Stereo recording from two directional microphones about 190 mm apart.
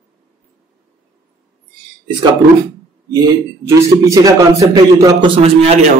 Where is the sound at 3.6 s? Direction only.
15° right (ahead or behind).